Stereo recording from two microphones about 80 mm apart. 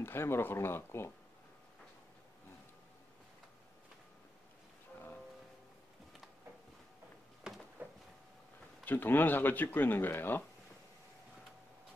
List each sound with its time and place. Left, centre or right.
0.0 s speech: left
7.8 s a sound: centre
8.8 s speech: left